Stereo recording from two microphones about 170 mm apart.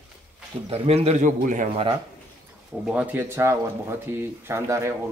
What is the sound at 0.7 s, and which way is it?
A man's voice, 35° right (ahead or behind).